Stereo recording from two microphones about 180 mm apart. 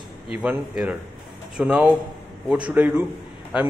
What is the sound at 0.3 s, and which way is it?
Speech, 5° right (ahead or behind).